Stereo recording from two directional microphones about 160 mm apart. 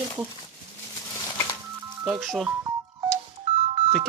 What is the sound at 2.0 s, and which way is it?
Speech, 10° right (ahead or behind).